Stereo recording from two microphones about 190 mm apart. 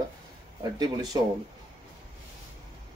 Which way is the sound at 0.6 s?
20° right (ahead or behind).